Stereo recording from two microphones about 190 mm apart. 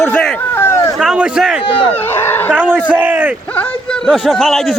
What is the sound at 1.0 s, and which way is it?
Speech, 5° right (ahead or behind).